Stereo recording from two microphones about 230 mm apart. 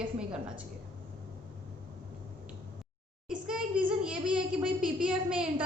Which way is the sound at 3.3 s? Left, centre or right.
Centre.